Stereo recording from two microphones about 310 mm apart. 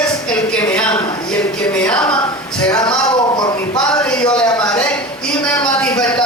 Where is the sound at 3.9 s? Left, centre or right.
Centre.